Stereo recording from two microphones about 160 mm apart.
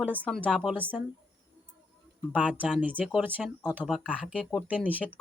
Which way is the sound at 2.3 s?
10° right (ahead or behind).